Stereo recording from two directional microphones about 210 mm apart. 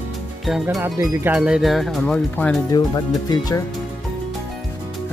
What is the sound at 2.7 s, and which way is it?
Speech, 20° left (ahead or behind).